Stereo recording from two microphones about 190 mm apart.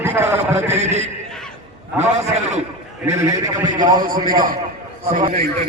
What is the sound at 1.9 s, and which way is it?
Speech, 35° right (ahead or behind).